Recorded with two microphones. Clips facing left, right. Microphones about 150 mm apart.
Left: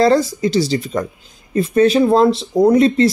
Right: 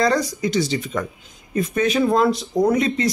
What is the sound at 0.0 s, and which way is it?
Speech, 30° left (ahead or behind).